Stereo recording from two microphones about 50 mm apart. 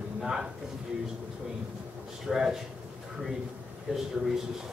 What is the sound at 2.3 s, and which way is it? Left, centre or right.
Speech, centre.